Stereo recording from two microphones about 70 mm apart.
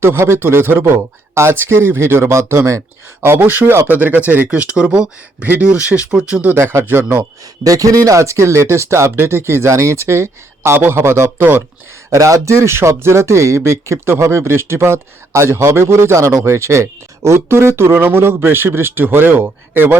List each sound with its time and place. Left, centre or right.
0.0 s speech: right
3.2 s speech: right; by 6.4 s centre
6.4 s speech: right
7.6 s speech: right
12.1 s speech: right